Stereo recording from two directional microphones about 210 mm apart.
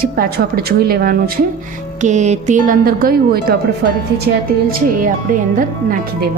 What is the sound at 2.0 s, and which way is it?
A woman's voice, 35° right (ahead or behind).